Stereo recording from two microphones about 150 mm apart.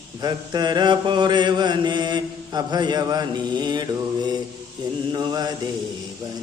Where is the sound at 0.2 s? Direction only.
25° right (ahead or behind).